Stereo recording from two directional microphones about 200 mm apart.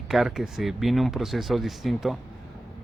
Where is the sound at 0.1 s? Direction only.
Centre (ahead or behind).